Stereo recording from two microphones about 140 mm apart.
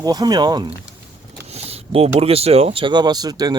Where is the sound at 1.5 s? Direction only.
45° right (ahead or behind).